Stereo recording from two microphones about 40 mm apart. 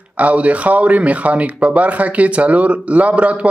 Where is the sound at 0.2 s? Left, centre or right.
Right.